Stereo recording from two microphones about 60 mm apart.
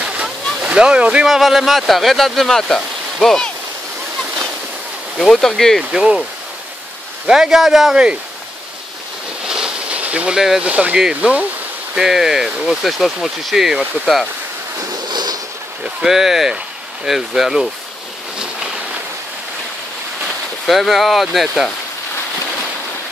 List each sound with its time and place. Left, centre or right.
0.0 s a sound: right
1.2 s speech: centre
5.2 s speech: centre
5.8 s speech: centre
7.2 s speech: centre
9.5 s bee: centre
10.6 s speech: right
11.9 s speech: centre
16.0 s speech: centre
20.6 s speech: centre